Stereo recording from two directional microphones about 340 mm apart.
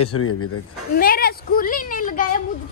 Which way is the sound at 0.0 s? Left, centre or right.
Left.